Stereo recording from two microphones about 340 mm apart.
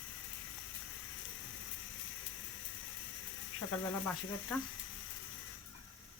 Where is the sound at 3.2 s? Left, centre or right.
Left.